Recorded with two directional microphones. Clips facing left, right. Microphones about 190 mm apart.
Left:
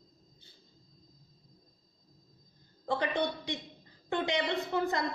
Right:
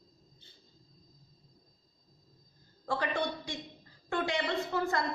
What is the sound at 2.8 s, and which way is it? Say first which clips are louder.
A woman's voice: left 2 dB; 20° left (ahead or behind).